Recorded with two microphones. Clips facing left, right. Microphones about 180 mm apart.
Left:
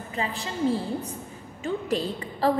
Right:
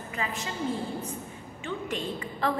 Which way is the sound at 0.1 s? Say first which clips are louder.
Left 3 dB; 30° left (ahead or behind).